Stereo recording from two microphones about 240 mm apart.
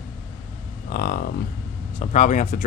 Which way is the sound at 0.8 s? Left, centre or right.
Left.